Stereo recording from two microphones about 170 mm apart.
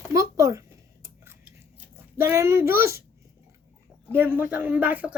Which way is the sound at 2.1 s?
15° right (ahead or behind).